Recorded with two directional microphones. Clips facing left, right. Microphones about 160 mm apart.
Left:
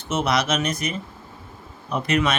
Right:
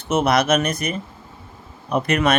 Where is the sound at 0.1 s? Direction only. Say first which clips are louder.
Right 5 dB; 55° right (ahead or behind).